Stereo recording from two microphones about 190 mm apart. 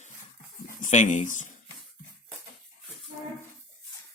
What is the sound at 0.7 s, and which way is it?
Speech, 40° left (ahead or behind).